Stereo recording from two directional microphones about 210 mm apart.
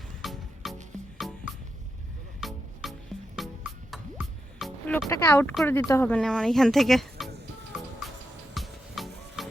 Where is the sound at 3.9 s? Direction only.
Centre (ahead or behind).